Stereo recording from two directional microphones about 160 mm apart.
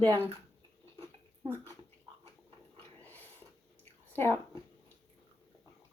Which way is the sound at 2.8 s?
10° left (ahead or behind).